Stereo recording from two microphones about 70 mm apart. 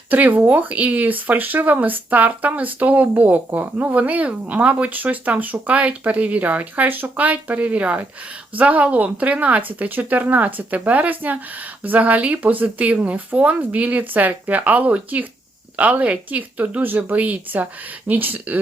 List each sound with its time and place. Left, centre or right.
0.1 s speech: right